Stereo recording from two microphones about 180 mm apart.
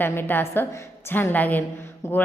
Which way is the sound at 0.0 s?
10° left (ahead or behind).